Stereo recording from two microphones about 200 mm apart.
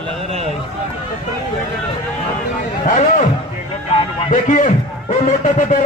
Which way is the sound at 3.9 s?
40° left (ahead or behind).